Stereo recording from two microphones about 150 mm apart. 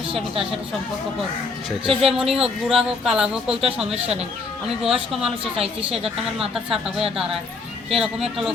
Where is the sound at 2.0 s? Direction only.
5° right (ahead or behind).